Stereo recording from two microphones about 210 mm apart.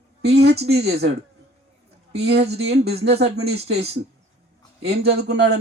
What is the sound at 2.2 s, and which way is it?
Speech, 50° right (ahead or behind).